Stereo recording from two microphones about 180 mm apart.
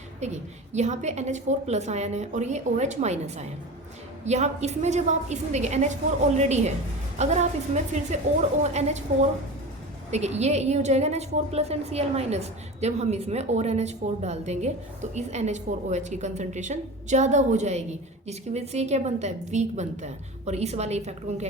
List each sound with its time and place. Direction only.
0.7 s a woman's voice: 40° right (ahead or behind)
10.1 s a woman's voice: 40° right (ahead or behind)